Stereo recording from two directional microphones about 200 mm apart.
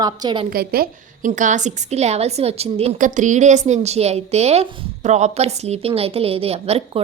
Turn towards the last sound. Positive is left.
turn(degrees=-30)  # may be behind; listen again after turning